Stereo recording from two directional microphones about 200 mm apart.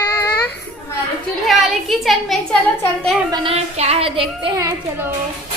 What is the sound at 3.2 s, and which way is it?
Speech, 25° right (ahead or behind).